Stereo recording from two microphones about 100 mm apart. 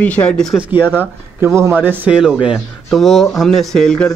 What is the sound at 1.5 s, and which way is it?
Speech, 20° right (ahead or behind).